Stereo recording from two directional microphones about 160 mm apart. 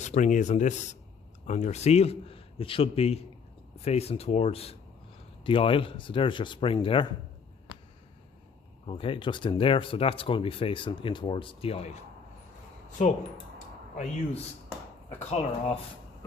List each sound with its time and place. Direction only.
0.0 s speech: 50° left (ahead or behind); by 7.1 s 30° left (ahead or behind)
8.9 s speech: 35° left (ahead or behind)
13.0 s speech: 50° left (ahead or behind)
15.2 s speech: 45° left (ahead or behind)